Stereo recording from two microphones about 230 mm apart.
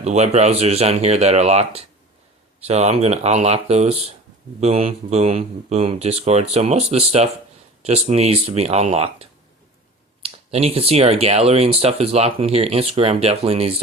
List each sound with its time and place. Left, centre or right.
0.0 s speech: right